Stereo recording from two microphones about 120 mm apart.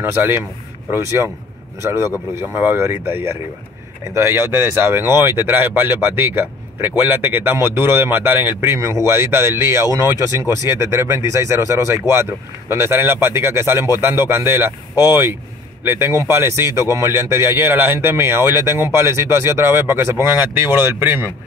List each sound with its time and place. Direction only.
0.0 s speech: 15° right (ahead or behind)